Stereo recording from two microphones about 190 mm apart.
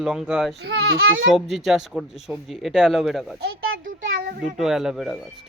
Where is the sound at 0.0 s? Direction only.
Centre (ahead or behind).